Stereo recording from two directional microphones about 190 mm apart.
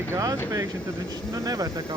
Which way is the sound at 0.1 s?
15° right (ahead or behind).